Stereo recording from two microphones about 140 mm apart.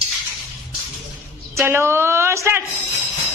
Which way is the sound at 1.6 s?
20° right (ahead or behind).